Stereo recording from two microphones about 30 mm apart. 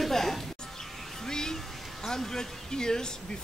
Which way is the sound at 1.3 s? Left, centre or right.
Left.